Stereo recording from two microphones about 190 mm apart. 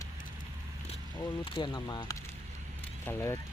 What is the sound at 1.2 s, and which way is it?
Speech, 25° left (ahead or behind).